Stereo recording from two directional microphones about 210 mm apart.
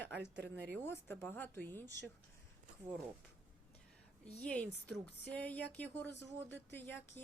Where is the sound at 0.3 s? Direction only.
55° right (ahead or behind).